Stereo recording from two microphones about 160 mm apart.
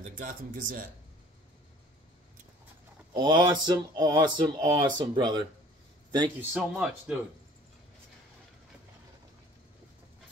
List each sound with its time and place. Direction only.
0.0 s speech: 55° right (ahead or behind)
3.2 s speech: 30° right (ahead or behind)
6.5 s speech: 5° right (ahead or behind)